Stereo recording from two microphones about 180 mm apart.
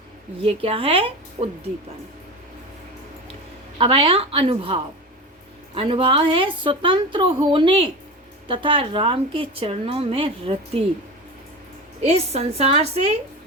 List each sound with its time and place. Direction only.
0.4 s a woman's voice: 30° right (ahead or behind)
3.8 s a woman's voice: 30° right (ahead or behind)
11.9 s a woman's voice: 35° right (ahead or behind)